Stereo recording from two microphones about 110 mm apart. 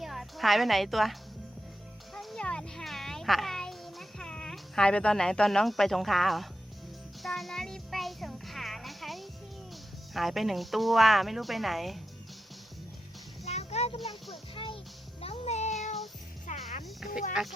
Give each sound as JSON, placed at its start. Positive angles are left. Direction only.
{"t": 0.0, "sound": "a woman's voice", "side_deg": 0}
{"t": 2.1, "sound": "a sound", "side_deg": 5}
{"t": 7.2, "sound": "music", "side_deg": 0}
{"t": 10.2, "sound": "speech", "side_deg": 0}
{"t": 13.4, "sound": "music", "side_deg": 75}
{"t": 14.5, "sound": "music", "side_deg": 50}
{"t": 15.2, "sound": "meow", "side_deg": 70}
{"t": 16.8, "sound": "insect", "side_deg": -5}